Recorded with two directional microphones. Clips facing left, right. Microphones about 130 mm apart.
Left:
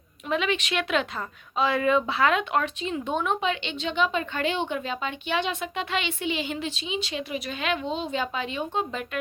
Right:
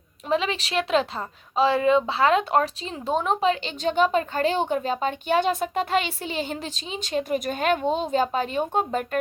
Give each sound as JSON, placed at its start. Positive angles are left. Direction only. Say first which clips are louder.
{"t": 0.3, "sound": "speech", "louder": "right 2 dB", "side_deg": -30}